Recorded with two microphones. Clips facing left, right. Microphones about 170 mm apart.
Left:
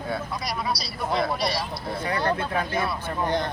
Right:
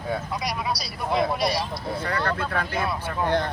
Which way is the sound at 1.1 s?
15° right (ahead or behind).